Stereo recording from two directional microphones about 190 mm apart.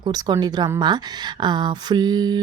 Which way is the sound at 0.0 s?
20° right (ahead or behind).